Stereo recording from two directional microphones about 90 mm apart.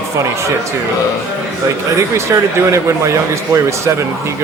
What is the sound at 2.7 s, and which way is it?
Speech, 35° right (ahead or behind).